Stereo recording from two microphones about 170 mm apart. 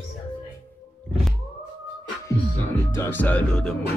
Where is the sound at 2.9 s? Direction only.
10° left (ahead or behind).